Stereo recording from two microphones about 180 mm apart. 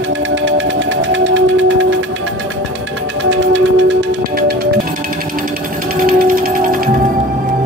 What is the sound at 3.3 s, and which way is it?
Music, 90° right.